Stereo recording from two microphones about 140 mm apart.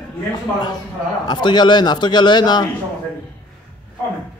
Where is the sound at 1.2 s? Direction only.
30° left (ahead or behind).